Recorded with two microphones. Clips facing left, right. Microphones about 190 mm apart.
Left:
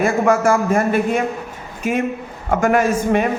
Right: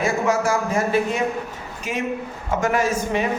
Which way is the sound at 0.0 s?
55° left (ahead or behind).